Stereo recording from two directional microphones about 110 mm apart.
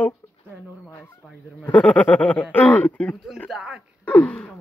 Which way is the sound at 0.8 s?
25° left (ahead or behind).